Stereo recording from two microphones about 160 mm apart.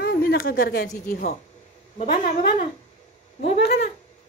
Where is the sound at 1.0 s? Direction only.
60° left (ahead or behind).